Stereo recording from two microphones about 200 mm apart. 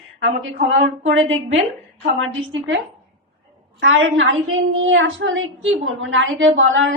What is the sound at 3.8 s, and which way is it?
A woman's voice, 75° right (ahead or behind).